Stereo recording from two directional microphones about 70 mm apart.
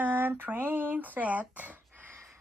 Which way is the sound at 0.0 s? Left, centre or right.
Right.